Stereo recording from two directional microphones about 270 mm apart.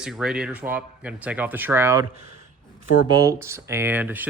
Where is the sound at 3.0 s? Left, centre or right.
Centre.